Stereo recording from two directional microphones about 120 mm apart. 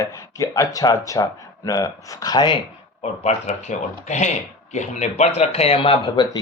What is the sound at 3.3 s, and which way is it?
Speech, 75° left (ahead or behind).